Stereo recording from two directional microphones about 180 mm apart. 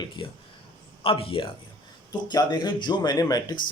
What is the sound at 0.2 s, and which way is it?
Speech, 30° left (ahead or behind).